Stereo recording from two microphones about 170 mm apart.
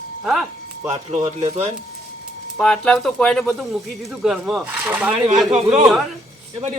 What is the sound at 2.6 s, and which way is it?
Speech, 5° left (ahead or behind).